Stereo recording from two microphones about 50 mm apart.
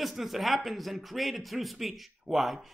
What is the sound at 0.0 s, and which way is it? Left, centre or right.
Speech, centre.